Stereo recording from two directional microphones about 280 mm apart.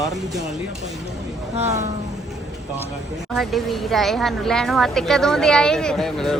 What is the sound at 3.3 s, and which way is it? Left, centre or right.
Speech, centre.